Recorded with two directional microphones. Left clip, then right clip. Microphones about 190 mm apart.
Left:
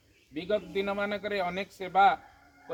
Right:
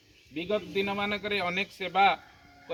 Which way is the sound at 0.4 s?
20° left (ahead or behind).